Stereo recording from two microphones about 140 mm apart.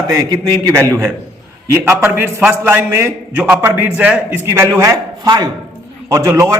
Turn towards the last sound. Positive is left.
turn(degrees=-25)  # may be behind; listen again after turning